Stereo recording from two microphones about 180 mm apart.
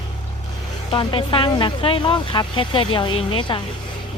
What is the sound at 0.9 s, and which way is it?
Speech, 30° left (ahead or behind).